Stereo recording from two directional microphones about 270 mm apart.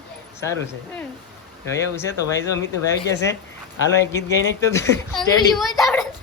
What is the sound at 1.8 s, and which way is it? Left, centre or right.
Speech, centre.